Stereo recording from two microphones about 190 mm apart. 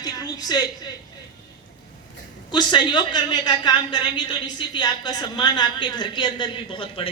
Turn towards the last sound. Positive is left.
turn(degrees=25)  # may be behind; listen again after turning